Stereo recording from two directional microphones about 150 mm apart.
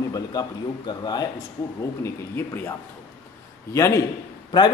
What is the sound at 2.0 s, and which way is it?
Speech, 15° left (ahead or behind).